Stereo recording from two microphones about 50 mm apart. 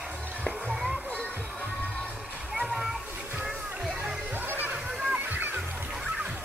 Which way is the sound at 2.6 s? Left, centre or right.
Centre.